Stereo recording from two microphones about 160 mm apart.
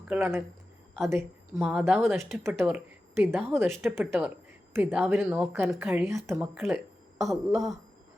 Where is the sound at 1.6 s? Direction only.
Centre (ahead or behind).